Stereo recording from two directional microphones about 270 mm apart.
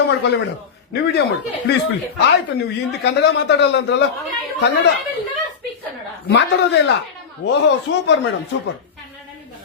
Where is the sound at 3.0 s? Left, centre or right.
Left.